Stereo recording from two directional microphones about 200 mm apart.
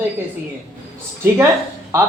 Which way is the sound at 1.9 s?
15° right (ahead or behind).